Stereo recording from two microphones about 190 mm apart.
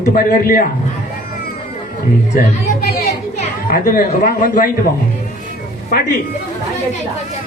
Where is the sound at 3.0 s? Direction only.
40° left (ahead or behind).